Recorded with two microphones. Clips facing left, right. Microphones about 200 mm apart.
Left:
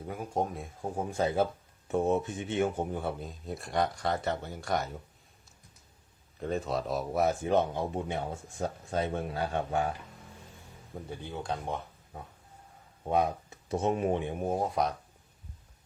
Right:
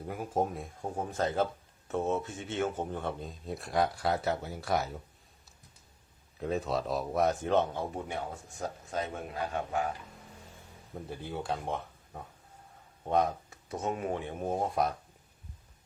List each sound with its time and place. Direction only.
0.0 s speech: centre (ahead or behind)
6.4 s speech: centre (ahead or behind); by 9.9 s 30° left (ahead or behind)
10.9 s speech: 5° right (ahead or behind)
13.5 s speech: 30° left (ahead or behind)
14.4 s speech: 5° left (ahead or behind)